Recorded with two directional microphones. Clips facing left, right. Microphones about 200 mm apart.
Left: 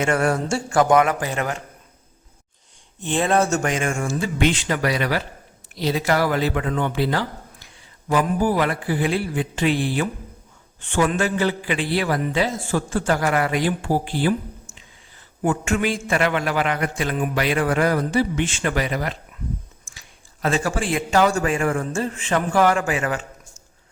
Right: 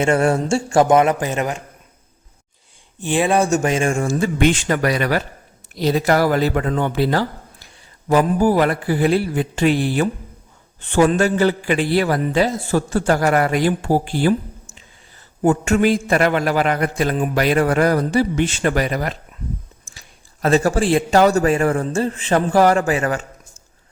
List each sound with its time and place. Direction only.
0.0 s a man's voice: 25° right (ahead or behind)
3.1 s speech: 10° right (ahead or behind)
3.5 s speech: 20° right (ahead or behind); by 14.3 s 45° right (ahead or behind)
15.4 s speech: 40° right (ahead or behind)